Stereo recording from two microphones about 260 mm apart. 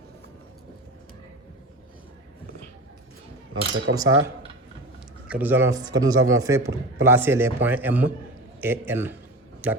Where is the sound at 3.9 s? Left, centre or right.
Right.